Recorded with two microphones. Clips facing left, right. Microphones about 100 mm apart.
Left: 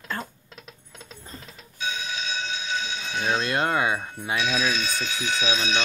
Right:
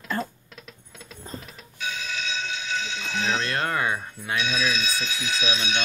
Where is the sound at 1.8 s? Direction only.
20° left (ahead or behind).